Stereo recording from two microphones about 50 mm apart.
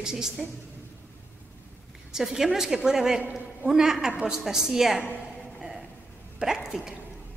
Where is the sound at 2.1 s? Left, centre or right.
Centre.